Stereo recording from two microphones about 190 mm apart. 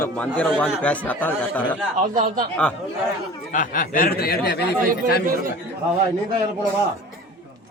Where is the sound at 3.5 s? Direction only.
45° left (ahead or behind); by 4.7 s 60° left (ahead or behind).